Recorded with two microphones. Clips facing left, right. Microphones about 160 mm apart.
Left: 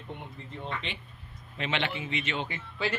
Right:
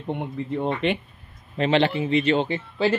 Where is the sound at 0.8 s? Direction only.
55° right (ahead or behind).